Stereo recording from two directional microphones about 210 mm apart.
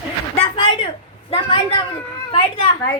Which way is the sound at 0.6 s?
25° left (ahead or behind).